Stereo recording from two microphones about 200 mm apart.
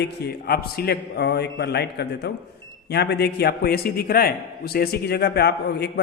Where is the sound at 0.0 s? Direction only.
50° left (ahead or behind).